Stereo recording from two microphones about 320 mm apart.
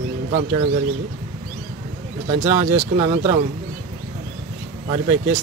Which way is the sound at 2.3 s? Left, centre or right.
Centre.